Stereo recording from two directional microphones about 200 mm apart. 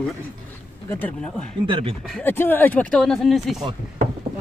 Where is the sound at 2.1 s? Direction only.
10° left (ahead or behind).